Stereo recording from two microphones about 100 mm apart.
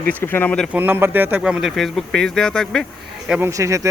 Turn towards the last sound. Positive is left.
turn(degrees=-30)  # may be behind; listen again after turning